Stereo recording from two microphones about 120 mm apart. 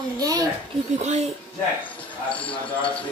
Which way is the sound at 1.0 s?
70° right (ahead or behind).